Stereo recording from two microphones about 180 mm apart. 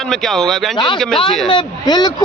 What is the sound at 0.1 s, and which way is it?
Speech, centre (ahead or behind).